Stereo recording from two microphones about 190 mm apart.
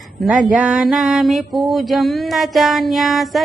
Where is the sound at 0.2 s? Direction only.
Centre (ahead or behind).